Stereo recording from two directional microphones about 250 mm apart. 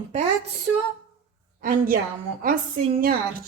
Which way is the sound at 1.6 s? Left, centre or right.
Right.